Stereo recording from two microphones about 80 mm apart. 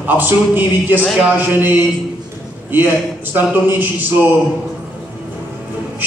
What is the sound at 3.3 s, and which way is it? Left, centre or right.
Speech, right.